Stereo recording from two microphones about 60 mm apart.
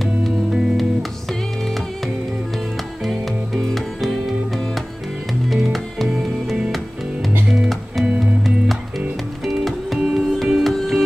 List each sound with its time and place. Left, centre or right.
3.1 s music: centre
5.5 s music: centre
8.0 s music: centre
9.5 s music: centre